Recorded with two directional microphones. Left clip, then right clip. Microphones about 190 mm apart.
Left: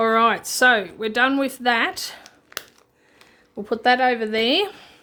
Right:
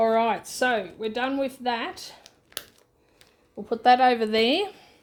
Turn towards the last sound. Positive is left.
turn(degrees=-5)  # may be behind; listen again after turning